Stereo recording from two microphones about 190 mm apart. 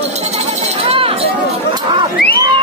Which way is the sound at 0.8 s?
30° right (ahead or behind).